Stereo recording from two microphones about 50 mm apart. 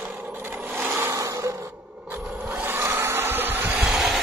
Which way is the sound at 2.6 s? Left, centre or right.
Right.